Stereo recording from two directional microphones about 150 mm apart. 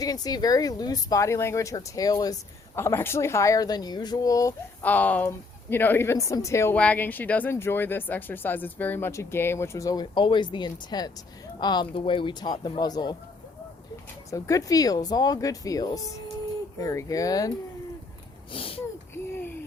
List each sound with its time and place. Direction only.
0.0 s speech: 25° left (ahead or behind)
4.8 s speech: 10° left (ahead or behind); by 13.1 s 25° left (ahead or behind)
14.3 s speech: 20° left (ahead or behind)
18.5 s speech: 40° left (ahead or behind)